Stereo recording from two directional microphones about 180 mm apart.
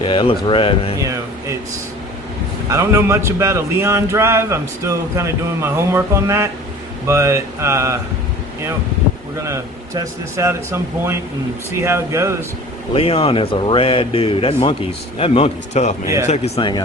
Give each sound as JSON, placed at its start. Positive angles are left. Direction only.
{"t": 0.0, "sound": "speech", "side_deg": 25}
{"t": 1.0, "sound": "a sound", "side_deg": -15}
{"t": 2.6, "sound": "speech", "side_deg": -15}
{"t": 9.4, "sound": "speech", "side_deg": -15}
{"t": 12.9, "sound": "speech", "side_deg": 30}
{"t": 16.6, "sound": "speech", "side_deg": 25}